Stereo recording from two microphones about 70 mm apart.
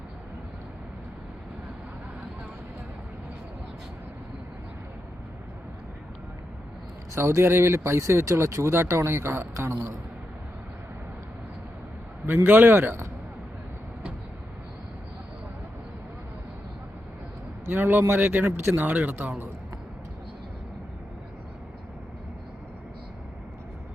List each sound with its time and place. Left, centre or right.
7.2 s speech: right
12.2 s speech: right
17.7 s speech: right